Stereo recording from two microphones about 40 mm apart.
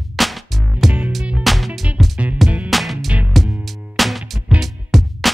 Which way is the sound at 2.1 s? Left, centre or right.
Right.